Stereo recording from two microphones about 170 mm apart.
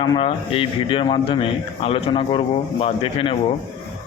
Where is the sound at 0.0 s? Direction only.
30° left (ahead or behind).